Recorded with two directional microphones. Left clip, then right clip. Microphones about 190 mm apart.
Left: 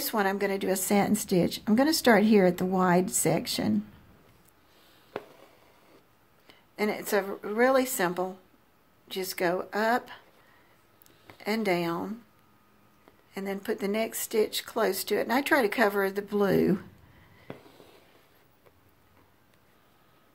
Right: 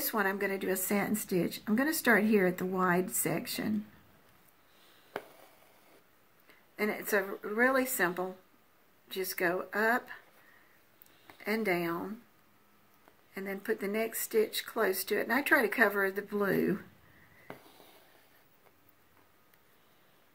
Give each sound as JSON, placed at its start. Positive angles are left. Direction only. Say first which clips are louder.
{"t": 0.1, "sound": "a woman's voice", "louder": "left 4 dB", "side_deg": 40}
{"t": 6.8, "sound": "a woman's voice", "louder": "left 3 dB", "side_deg": 45}
{"t": 9.4, "sound": "speech", "louder": "left 3 dB", "side_deg": 40}
{"t": 11.4, "sound": "speech", "louder": "left 4 dB", "side_deg": 45}
{"t": 13.3, "sound": "speech", "louder": "left 3 dB", "side_deg": 45}